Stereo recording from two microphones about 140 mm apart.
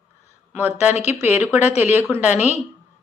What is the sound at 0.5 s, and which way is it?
Speech, 10° right (ahead or behind).